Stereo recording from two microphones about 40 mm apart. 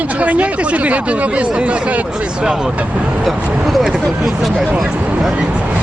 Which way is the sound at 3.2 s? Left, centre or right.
Centre.